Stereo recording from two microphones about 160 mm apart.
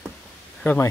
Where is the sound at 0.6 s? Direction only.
10° left (ahead or behind).